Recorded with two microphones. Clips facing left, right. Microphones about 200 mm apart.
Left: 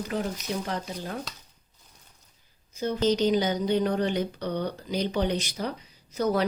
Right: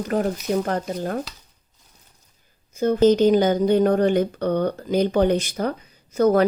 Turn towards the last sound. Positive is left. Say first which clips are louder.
# right 8 dB
turn(degrees=-50)  # may be behind; listen again after turning